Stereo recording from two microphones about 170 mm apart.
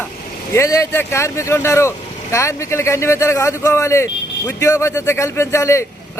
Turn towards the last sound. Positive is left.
turn(degrees=15)  # may be behind; listen again after turning